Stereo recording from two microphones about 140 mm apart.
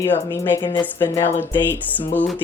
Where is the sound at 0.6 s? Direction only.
35° left (ahead or behind).